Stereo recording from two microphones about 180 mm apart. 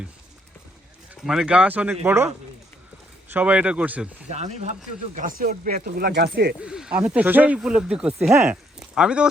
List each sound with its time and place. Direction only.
1.1 s speech: 5° right (ahead or behind)
4.3 s speech: 40° right (ahead or behind)
5.1 s speech: 50° right (ahead or behind)
6.6 s speech: 5° right (ahead or behind)